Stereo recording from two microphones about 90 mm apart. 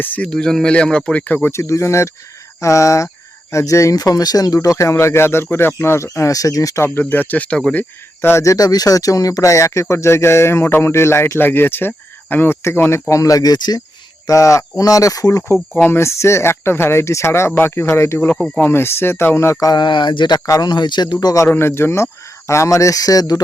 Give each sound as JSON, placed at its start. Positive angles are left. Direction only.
{"t": 0.0, "sound": "speech", "side_deg": 10}
{"t": 6.8, "sound": "speech", "side_deg": 25}
{"t": 14.3, "sound": "speech", "side_deg": 35}
{"t": 15.7, "sound": "speech", "side_deg": 25}
{"t": 19.7, "sound": "speech", "side_deg": 60}
{"t": 20.4, "sound": "speech", "side_deg": 35}
{"t": 20.7, "sound": "speech", "side_deg": 55}
{"t": 21.4, "sound": "speech", "side_deg": 25}